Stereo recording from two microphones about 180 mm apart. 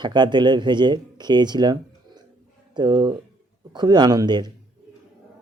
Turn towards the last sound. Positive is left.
turn(degrees=-25)  # may be behind; listen again after turning